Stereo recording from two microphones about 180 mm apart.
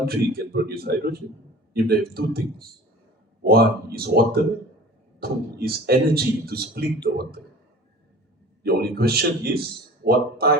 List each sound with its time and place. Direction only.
0.0 s speech: 60° right (ahead or behind)
8.6 s speech: 60° right (ahead or behind)